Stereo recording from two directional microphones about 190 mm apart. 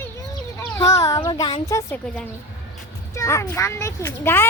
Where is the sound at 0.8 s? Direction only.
15° left (ahead or behind).